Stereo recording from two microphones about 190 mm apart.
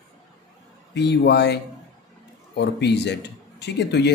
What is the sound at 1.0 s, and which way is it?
A man's voice, 65° left (ahead or behind).